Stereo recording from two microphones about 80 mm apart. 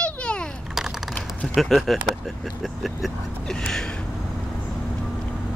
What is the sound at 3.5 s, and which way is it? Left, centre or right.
Gasp, centre.